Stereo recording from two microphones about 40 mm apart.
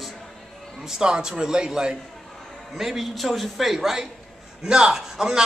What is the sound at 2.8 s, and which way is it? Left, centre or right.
Speech, centre.